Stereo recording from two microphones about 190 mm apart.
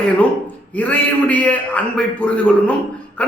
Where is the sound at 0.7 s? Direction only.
5° left (ahead or behind).